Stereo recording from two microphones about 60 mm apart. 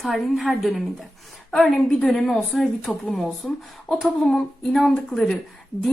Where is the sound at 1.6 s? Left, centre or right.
Centre.